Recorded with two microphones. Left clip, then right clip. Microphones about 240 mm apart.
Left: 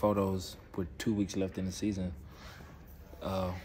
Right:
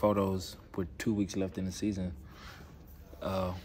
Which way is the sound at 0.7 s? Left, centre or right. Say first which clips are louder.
Right 1 dB; centre.